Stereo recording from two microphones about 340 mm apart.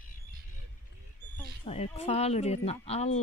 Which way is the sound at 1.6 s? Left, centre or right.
Centre.